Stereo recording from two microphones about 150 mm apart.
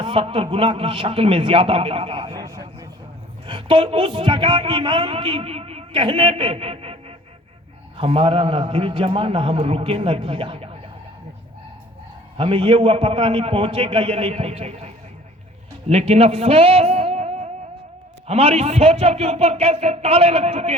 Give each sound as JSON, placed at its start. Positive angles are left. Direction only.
{"t": 0.0, "sound": "a man's voice", "side_deg": -35}
{"t": 3.4, "sound": "a man's voice", "side_deg": -35}
{"t": 12.4, "sound": "a man's voice", "side_deg": -35}